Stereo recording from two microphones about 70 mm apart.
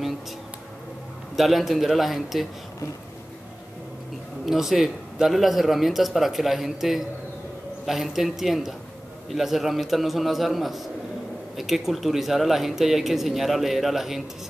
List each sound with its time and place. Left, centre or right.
1.3 s speech: centre
4.5 s speech: centre